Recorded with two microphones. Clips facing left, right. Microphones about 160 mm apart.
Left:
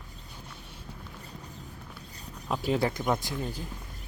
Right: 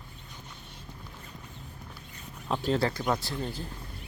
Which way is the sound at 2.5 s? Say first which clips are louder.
Even; 10° left (ahead or behind).